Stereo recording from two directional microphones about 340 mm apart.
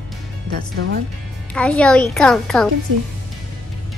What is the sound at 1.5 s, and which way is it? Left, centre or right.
A child's voice, centre.